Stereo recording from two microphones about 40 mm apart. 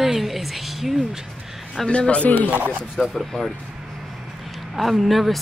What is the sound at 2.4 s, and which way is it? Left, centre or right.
Speech, right.